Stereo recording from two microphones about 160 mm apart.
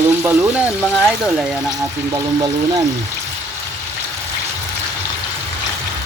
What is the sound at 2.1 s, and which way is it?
Speech, 20° right (ahead or behind).